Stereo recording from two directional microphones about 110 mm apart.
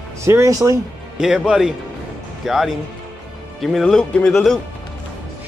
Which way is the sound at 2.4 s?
Centre (ahead or behind).